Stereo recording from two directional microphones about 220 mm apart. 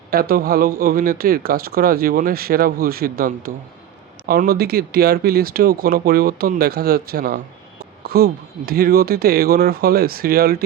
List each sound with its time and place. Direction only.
0.1 s speech: 45° right (ahead or behind)